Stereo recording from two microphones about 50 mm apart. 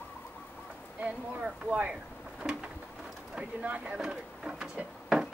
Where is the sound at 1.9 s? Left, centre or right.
Centre.